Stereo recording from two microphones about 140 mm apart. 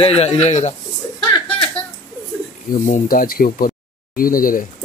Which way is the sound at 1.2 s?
10° left (ahead or behind).